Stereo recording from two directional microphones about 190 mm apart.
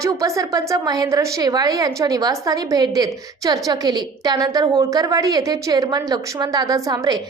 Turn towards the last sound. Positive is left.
turn(degrees=-20)  # may be behind; listen again after turning